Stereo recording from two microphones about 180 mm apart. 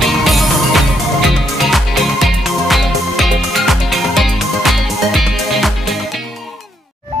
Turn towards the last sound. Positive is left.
turn(degrees=0)  # may be behind; listen again after turning